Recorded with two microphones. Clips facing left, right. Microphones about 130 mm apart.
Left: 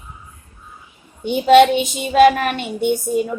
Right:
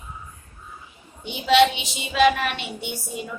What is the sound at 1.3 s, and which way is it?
Speech, 50° left (ahead or behind).